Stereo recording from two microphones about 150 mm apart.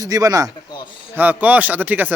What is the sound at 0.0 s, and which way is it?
Speech, 25° right (ahead or behind).